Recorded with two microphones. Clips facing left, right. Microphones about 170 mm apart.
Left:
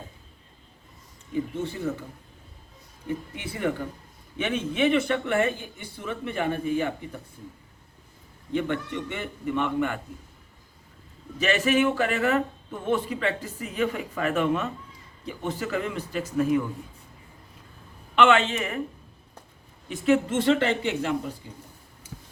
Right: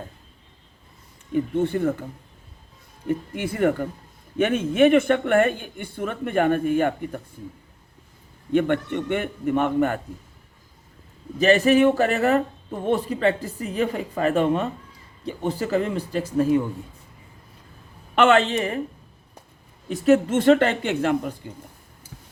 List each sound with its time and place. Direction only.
1.3 s speech: 55° right (ahead or behind)
3.1 s speech: 50° right (ahead or behind)
8.5 s a man's voice: 55° right (ahead or behind)
11.3 s speech: 35° right (ahead or behind)
18.1 s speech: 40° right (ahead or behind)
19.9 s speech: 45° right (ahead or behind)